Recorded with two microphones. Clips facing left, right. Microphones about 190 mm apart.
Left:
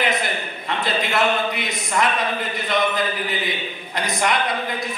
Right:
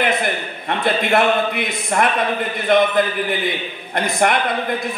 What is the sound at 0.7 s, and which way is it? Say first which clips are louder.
A man's voice: right 6 dB; 55° right (ahead or behind).